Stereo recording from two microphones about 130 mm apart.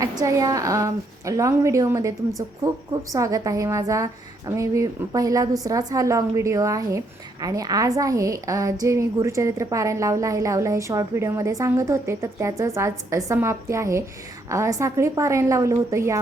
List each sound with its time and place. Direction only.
0.0 s a woman's voice: 25° right (ahead or behind)